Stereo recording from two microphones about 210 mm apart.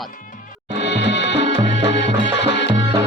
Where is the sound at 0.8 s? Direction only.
55° left (ahead or behind).